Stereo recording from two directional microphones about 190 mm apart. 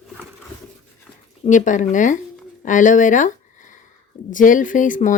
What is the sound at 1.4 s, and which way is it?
Speech, 40° left (ahead or behind).